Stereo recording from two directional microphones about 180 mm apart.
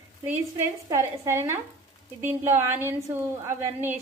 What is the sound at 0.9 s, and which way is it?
A woman's voice, 15° right (ahead or behind).